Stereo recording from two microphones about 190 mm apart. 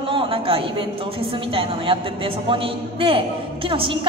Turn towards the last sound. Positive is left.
turn(degrees=-30)  # may be behind; listen again after turning